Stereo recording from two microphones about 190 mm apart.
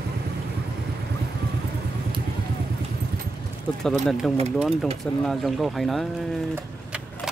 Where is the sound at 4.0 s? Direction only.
Centre (ahead or behind).